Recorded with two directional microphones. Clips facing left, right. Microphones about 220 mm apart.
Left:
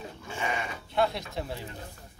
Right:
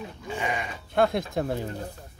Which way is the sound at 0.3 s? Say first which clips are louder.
Right 3 dB; 15° right (ahead or behind).